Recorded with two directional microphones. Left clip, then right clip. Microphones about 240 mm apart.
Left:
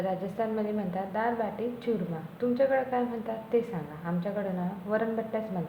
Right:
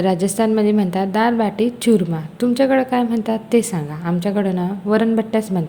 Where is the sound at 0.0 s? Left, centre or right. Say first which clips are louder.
Right 13 dB; right.